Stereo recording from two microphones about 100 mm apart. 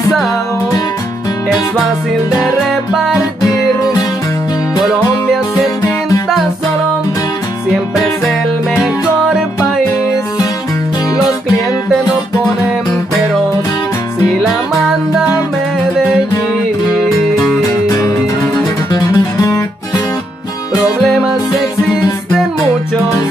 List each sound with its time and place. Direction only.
2.9 s music: 5° right (ahead or behind)
3.2 s music: 35° left (ahead or behind)
17.8 s music: 35° left (ahead or behind)
20.7 s music: centre (ahead or behind)